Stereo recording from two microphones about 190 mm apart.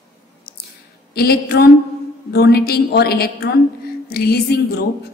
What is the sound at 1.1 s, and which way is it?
A woman's voice, 55° left (ahead or behind).